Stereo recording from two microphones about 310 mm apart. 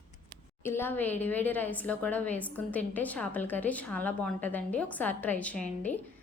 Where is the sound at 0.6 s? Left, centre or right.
Centre.